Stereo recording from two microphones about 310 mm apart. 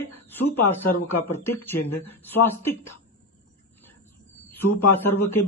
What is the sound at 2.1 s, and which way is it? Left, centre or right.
Speech, centre.